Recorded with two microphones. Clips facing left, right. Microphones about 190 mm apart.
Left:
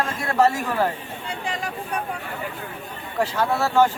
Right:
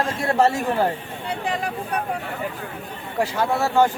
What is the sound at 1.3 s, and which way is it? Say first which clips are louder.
Speech: right 4 dB; 60° right (ahead or behind).